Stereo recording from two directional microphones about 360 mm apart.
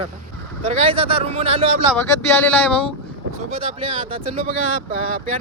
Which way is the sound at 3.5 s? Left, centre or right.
Centre.